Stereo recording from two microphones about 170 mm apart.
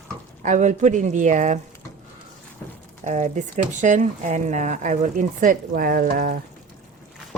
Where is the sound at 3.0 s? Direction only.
45° right (ahead or behind).